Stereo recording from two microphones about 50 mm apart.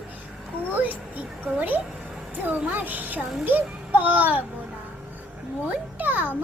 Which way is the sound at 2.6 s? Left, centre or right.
Right.